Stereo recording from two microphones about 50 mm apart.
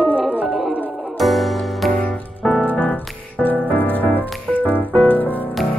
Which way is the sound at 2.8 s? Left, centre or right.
Left.